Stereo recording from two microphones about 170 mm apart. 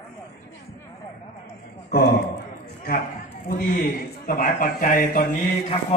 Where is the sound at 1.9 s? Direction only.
65° left (ahead or behind).